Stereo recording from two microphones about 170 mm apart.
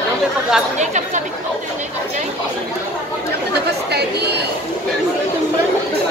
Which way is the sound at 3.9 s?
75° right (ahead or behind).